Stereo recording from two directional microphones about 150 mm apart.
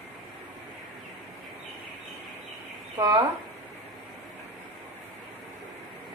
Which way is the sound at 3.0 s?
30° right (ahead or behind).